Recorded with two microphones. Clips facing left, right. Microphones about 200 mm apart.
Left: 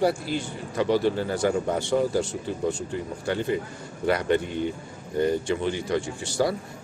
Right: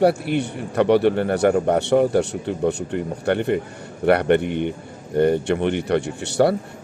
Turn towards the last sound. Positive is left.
turn(degrees=-65)  # may be behind; listen again after turning